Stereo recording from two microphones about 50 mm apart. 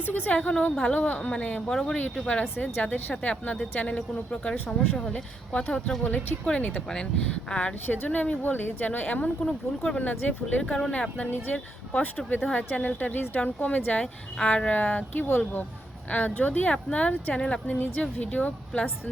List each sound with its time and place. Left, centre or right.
0.0 s speech: left
1.7 s speech: centre
2.2 s speech: left
5.1 s speech: left
6.1 s speech: left
9.4 s speech: centre
10.0 s speech: left